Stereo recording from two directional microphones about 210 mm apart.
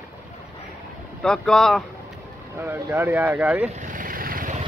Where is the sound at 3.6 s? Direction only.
35° right (ahead or behind).